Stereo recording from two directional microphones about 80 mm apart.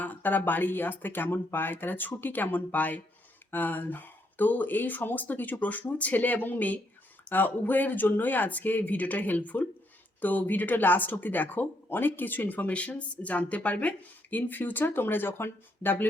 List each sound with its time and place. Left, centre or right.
0.0 s speech: left